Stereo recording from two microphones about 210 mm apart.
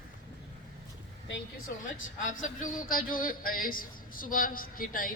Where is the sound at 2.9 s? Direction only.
40° left (ahead or behind).